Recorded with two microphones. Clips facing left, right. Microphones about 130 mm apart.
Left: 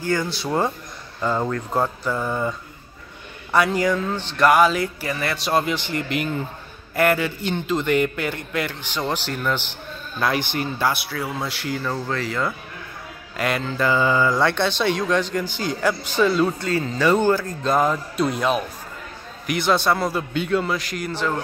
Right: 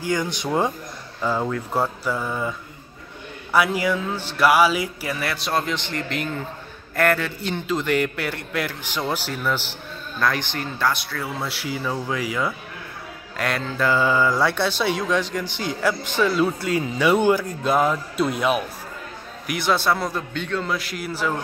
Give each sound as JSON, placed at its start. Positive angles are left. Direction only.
{"t": 0.0, "sound": "speech", "side_deg": -15}
{"t": 1.2, "sound": "speech", "side_deg": -5}
{"t": 3.5, "sound": "speech", "side_deg": -5}
{"t": 10.2, "sound": "speech", "side_deg": 10}
{"t": 13.4, "sound": "speech", "side_deg": 0}
{"t": 20.7, "sound": "speech", "side_deg": 0}